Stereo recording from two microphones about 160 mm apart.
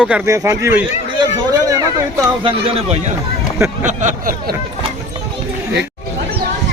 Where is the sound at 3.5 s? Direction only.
20° right (ahead or behind).